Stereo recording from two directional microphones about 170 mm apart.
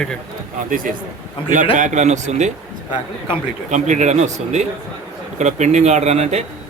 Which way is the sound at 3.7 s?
45° right (ahead or behind).